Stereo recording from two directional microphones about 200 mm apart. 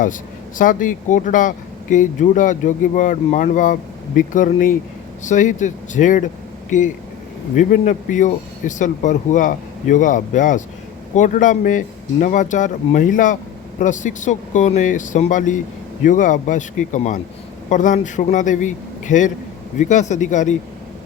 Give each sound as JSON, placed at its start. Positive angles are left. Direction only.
{"t": 0.6, "sound": "speech", "side_deg": 40}